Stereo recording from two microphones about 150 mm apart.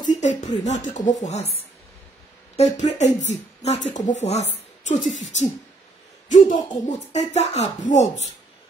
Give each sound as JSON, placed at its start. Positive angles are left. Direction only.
{"t": 0.0, "sound": "speech", "side_deg": 55}
{"t": 2.5, "sound": "speech", "side_deg": 50}